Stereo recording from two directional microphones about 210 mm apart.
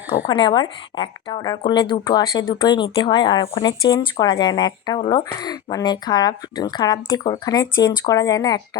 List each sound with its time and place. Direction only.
0.3 s speech: 20° left (ahead or behind)